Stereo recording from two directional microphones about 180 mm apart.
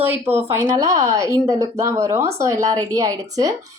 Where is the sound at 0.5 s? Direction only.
15° right (ahead or behind).